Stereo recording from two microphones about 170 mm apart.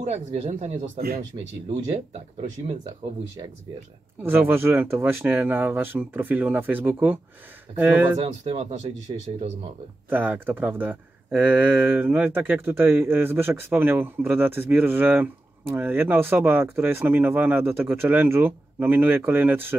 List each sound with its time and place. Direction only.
0.1 s speech: 40° right (ahead or behind)
0.9 s speech: 60° right (ahead or behind)
4.2 s speech: 15° right (ahead or behind)
8.2 s speech: 35° right (ahead or behind)
10.0 s speech: 10° right (ahead or behind)